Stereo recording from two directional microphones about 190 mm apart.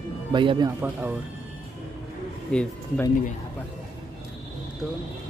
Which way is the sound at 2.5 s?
5° left (ahead or behind).